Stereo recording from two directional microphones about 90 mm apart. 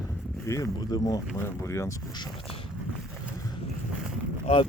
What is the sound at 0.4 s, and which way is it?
Speech, 40° left (ahead or behind).